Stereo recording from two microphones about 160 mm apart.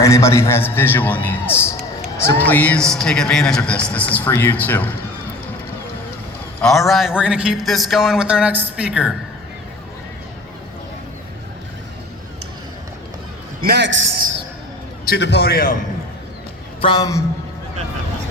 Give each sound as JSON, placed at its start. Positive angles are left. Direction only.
{"t": 0.0, "sound": "a man's voice", "side_deg": 20}
{"t": 6.6, "sound": "a man's voice", "side_deg": 0}
{"t": 13.7, "sound": "a man's voice", "side_deg": -75}
{"t": 15.0, "sound": "a man's voice", "side_deg": 80}
{"t": 16.8, "sound": "a man's voice", "side_deg": 25}